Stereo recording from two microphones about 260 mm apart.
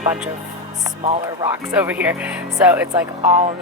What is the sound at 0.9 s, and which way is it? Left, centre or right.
Speech, right.